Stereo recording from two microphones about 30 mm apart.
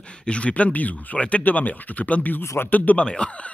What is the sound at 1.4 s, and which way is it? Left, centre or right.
Speech, left.